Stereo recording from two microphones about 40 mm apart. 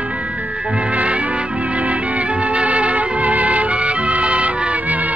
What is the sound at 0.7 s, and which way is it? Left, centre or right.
Music, right.